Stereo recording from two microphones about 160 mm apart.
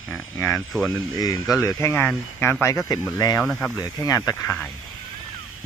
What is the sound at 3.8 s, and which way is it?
Speech, 20° left (ahead or behind).